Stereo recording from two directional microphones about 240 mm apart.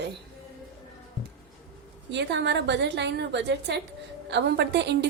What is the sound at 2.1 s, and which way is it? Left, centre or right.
A woman's voice, right.